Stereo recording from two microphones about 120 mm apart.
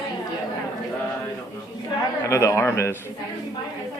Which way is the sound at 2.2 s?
25° left (ahead or behind).